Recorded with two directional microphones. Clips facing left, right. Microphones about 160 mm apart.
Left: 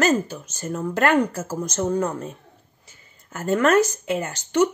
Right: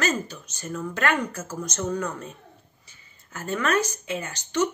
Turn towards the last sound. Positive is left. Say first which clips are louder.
# left 5 dB
turn(degrees=45)  # may be behind; listen again after turning